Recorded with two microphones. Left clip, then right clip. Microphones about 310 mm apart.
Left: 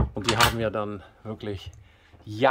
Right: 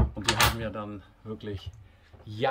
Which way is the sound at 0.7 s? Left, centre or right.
Centre.